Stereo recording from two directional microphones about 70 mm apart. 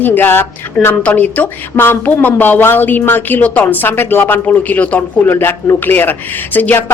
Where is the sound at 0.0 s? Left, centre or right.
Left.